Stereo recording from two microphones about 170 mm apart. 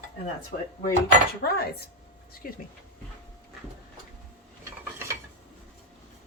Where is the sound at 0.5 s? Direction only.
45° left (ahead or behind).